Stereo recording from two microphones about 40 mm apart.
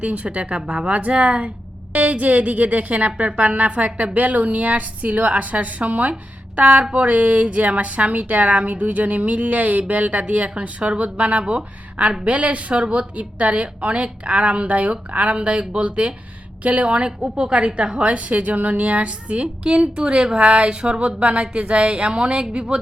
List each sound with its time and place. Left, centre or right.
0.0 s a woman's voice: right